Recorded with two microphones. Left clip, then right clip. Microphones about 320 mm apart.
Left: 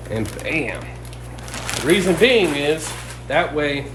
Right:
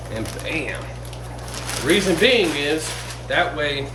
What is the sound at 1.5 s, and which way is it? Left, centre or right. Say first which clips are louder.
Speech: left 1 dB; centre.